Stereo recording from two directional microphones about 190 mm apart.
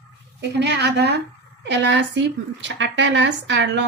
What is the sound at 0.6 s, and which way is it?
A woman's voice, 60° right (ahead or behind).